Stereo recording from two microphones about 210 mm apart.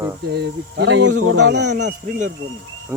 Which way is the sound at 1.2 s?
90° right.